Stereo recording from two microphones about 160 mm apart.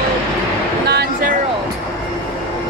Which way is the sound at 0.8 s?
90° right.